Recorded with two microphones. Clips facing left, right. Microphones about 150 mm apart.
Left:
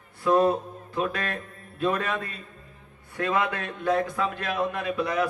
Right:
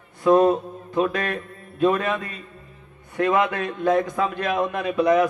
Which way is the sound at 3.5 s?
20° right (ahead or behind).